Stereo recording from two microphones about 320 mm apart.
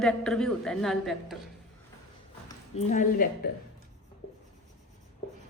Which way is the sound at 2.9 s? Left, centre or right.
Left.